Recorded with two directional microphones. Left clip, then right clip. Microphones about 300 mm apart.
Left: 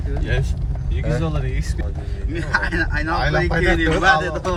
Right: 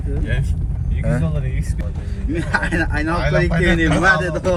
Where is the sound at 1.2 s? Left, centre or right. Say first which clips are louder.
Left 1 dB; left.